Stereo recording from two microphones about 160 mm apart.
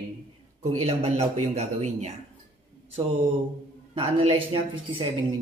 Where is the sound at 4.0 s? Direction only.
35° right (ahead or behind).